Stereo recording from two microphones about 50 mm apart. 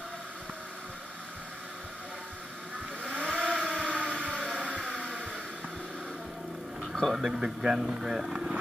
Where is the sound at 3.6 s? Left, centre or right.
Centre.